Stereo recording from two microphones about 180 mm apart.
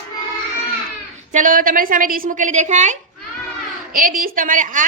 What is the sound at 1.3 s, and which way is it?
A woman's voice, 45° right (ahead or behind).